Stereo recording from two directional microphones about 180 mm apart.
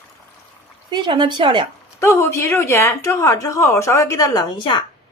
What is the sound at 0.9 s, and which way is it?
Speech, 25° right (ahead or behind).